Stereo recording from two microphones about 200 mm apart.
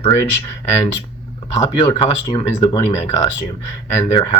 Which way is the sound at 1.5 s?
15° left (ahead or behind).